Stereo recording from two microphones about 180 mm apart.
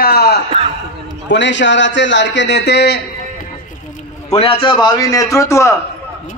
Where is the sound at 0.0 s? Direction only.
60° left (ahead or behind).